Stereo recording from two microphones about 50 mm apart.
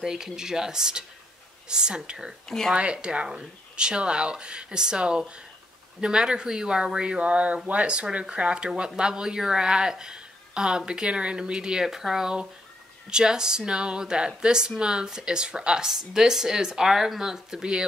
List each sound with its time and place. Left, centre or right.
0.0 s speech: centre
2.4 s speech: centre
2.7 s speech: right